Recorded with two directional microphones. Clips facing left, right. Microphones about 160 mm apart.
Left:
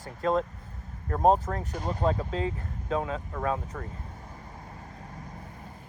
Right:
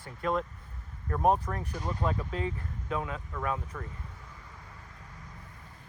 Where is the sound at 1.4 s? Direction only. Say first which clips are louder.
Left 3 dB; 35° left (ahead or behind).